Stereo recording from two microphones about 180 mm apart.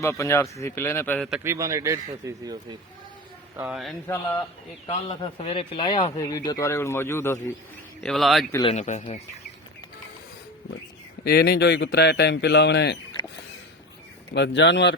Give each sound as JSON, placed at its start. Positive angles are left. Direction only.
{"t": 0.0, "sound": "speech", "side_deg": 15}
{"t": 1.5, "sound": "speech", "side_deg": -15}
{"t": 3.7, "sound": "a man's voice", "side_deg": 0}
{"t": 4.0, "sound": "speech", "side_deg": 15}
{"t": 4.9, "sound": "speech", "side_deg": 30}
{"t": 8.0, "sound": "a man's voice", "side_deg": 0}
{"t": 8.6, "sound": "speech", "side_deg": 40}
{"t": 11.2, "sound": "speech", "side_deg": 65}
{"t": 14.3, "sound": "speech", "side_deg": 80}